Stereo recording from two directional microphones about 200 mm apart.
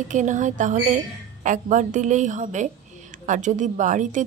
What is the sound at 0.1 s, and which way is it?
A woman's voice, 40° right (ahead or behind).